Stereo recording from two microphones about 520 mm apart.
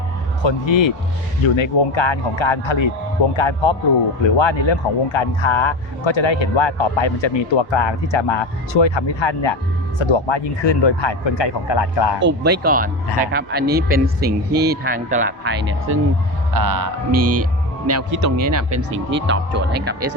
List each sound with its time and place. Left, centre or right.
0.4 s speech: left
12.2 s speech: centre
16.6 s speech: right; by 20.1 s centre